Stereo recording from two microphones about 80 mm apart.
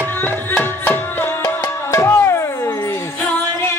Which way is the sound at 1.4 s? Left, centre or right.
Left.